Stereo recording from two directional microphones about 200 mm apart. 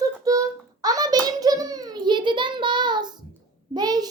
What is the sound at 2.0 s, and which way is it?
Child singing, 25° right (ahead or behind).